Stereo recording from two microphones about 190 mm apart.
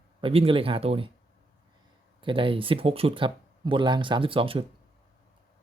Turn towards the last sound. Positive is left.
turn(degrees=-30)  # may be behind; listen again after turning